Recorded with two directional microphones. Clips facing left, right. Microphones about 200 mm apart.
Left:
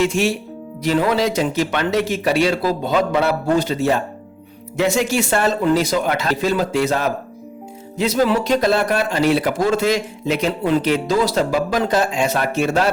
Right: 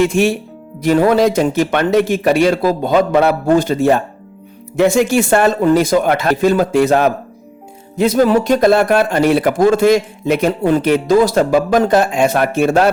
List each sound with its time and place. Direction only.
0.0 s speech: 55° right (ahead or behind)